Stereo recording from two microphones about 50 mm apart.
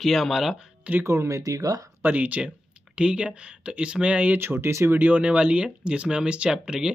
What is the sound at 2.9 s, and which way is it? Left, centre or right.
Speech, centre.